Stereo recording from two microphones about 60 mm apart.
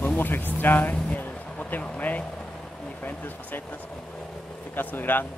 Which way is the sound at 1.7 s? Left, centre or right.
Left.